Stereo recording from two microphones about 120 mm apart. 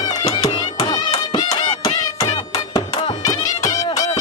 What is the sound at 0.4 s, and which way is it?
Music, 55° left (ahead or behind).